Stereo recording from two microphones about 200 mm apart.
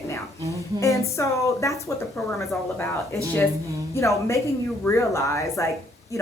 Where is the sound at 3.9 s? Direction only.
15° left (ahead or behind).